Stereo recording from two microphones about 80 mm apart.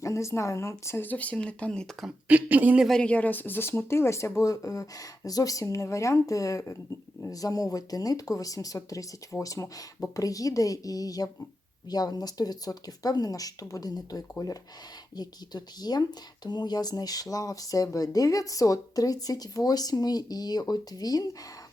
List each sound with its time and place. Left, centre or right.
0.0 s speech: left
1.0 s speech: centre
2.2 s speech: right
2.8 s speech: centre; by 21.2 s left